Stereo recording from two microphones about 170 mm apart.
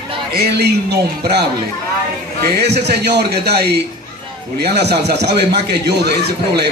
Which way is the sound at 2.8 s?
75° right (ahead or behind).